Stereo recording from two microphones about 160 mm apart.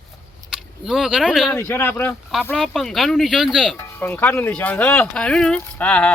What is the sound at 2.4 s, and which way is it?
Speech, 5° left (ahead or behind).